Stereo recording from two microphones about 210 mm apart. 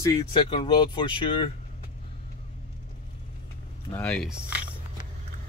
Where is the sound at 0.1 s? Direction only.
25° left (ahead or behind).